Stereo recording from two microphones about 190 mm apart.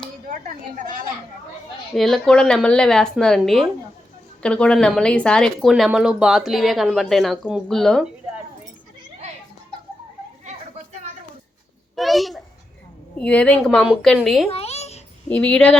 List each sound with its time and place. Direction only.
0.3 s a woman's voice: 45° right (ahead or behind)
2.0 s speech: centre (ahead or behind)
11.9 s a child's voice: centre (ahead or behind)
14.5 s babbling: 35° left (ahead or behind)
15.3 s speech: 5° left (ahead or behind)